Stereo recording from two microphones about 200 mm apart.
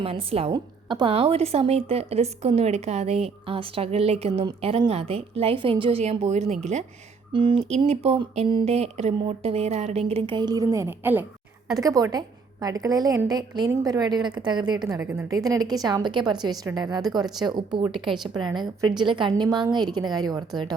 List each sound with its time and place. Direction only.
0.0 s a woman's voice: 30° right (ahead or behind)